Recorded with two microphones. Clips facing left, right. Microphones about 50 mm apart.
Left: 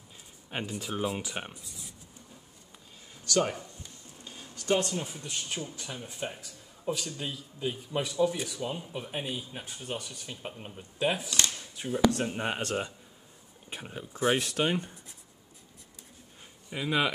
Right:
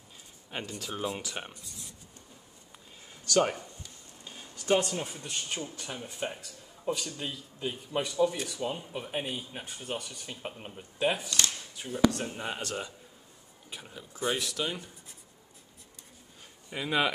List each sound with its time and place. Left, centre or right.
0.5 s speech: centre
1.6 s speech: centre
3.3 s speech: centre
4.2 s a sound: centre
5.2 s speech: centre
11.2 s shuffling cards: centre
12.4 s speech: left
16.7 s speech: centre